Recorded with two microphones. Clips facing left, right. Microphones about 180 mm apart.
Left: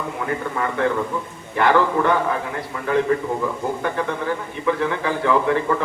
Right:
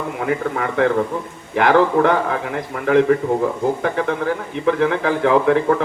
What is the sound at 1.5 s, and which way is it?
Speech, 75° right (ahead or behind).